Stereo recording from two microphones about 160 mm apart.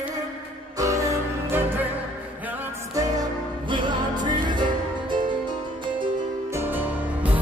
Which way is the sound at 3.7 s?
30° right (ahead or behind).